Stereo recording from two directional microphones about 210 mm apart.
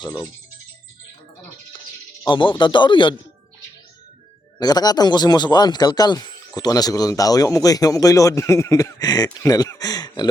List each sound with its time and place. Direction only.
0.0 s speech: 10° left (ahead or behind)
2.2 s speech: 25° left (ahead or behind)
4.5 s speech: 20° left (ahead or behind)